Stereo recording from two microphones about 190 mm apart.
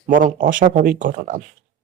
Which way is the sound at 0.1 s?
45° right (ahead or behind).